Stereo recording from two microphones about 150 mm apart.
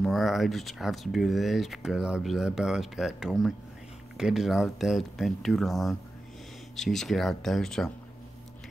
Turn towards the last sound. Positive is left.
turn(degrees=5)  # may be behind; listen again after turning